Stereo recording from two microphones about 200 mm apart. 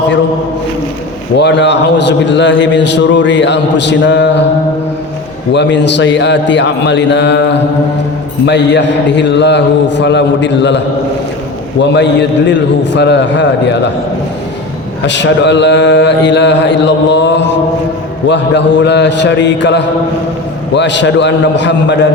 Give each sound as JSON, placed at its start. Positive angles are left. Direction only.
{"t": 1.4, "sound": "a man's voice", "side_deg": 60}
{"t": 5.5, "sound": "a man's voice", "side_deg": 60}
{"t": 12.5, "sound": "a man's voice", "side_deg": 65}
{"t": 15.0, "sound": "a man's voice", "side_deg": 65}